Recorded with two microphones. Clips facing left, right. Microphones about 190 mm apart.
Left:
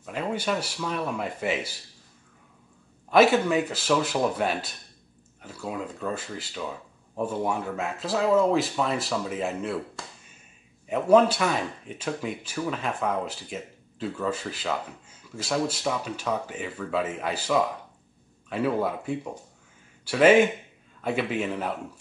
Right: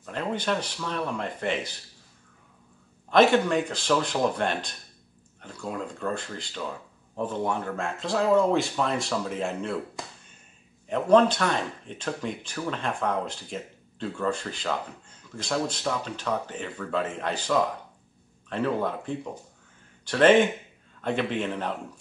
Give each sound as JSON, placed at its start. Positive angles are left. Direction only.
{"t": 0.0, "sound": "speech", "side_deg": 5}
{"t": 3.1, "sound": "speech", "side_deg": 5}
{"t": 10.9, "sound": "speech", "side_deg": 5}